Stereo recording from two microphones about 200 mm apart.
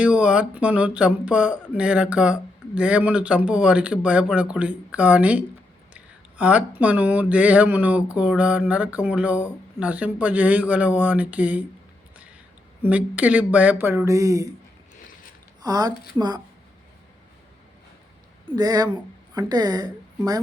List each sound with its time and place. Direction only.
0.0 s speech: 5° right (ahead or behind)
12.8 s speech: 5° right (ahead or behind)
15.6 s speech: 20° right (ahead or behind)
18.4 s a woman's voice: 20° right (ahead or behind)